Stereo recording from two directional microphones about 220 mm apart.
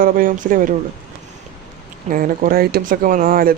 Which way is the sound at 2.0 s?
40° right (ahead or behind).